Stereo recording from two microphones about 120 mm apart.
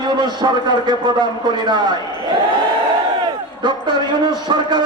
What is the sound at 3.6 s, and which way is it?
Speech, 40° right (ahead or behind).